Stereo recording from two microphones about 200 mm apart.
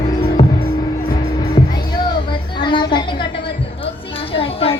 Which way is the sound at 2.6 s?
25° left (ahead or behind).